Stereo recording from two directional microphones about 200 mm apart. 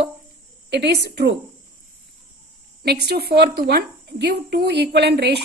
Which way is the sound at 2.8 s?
55° right (ahead or behind).